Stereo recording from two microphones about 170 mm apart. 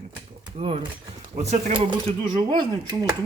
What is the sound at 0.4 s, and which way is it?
Speech, 35° right (ahead or behind).